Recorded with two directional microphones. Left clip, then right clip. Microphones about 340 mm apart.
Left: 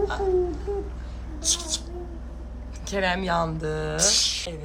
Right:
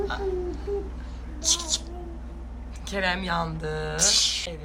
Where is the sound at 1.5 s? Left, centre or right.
Centre.